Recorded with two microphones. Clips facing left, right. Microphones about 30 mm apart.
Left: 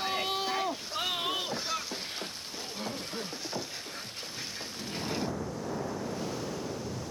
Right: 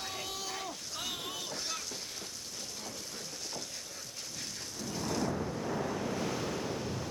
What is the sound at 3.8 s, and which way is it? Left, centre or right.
Music, left.